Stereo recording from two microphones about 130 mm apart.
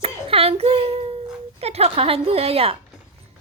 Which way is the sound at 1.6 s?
55° right (ahead or behind).